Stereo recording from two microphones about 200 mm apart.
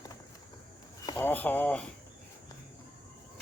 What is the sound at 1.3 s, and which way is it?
Speech, 10° left (ahead or behind).